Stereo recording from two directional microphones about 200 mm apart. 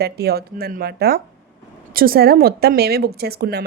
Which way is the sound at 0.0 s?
50° right (ahead or behind).